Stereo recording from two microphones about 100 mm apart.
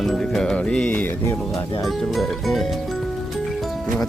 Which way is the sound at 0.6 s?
10° left (ahead or behind).